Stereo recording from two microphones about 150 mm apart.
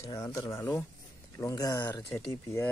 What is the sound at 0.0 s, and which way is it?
Speech, 20° left (ahead or behind).